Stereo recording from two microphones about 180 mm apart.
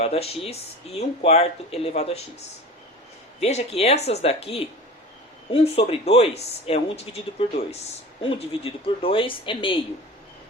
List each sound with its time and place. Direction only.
0.0 s speech: 35° left (ahead or behind)
3.4 s speech: 35° left (ahead or behind)